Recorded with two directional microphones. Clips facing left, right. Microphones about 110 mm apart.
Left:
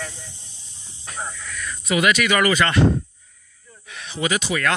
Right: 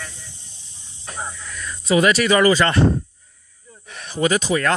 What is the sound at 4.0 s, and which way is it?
Speech, 40° right (ahead or behind).